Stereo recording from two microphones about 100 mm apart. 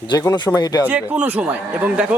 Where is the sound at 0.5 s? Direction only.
40° left (ahead or behind).